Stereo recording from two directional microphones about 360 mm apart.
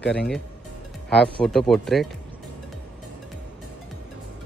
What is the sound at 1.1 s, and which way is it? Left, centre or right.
Speech, centre.